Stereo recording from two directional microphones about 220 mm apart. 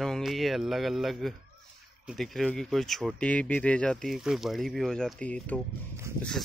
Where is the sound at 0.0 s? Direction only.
Centre (ahead or behind).